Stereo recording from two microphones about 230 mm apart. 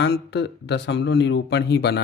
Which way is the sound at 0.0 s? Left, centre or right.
Left.